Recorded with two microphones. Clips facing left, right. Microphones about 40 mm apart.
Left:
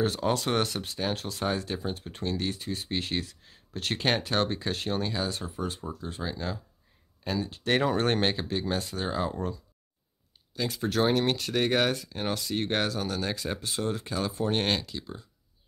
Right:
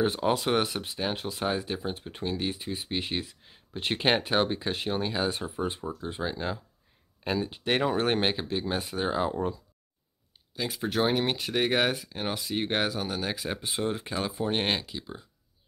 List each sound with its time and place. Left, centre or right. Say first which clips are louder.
0.0 s speech: right 1 dB; centre
5.1 s speech: right 3 dB; right
7.6 s speech: left 1 dB; centre
10.5 s speech: left 1 dB; centre
14.3 s speech: left 1 dB; centre